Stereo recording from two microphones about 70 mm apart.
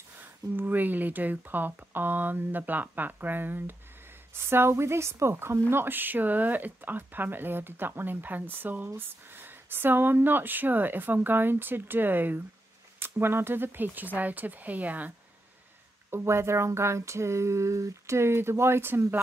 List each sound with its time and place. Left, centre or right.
0.6 s speech: right
16.1 s speech: right